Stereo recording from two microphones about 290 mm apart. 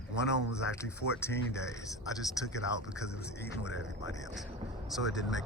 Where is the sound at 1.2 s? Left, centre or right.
Centre.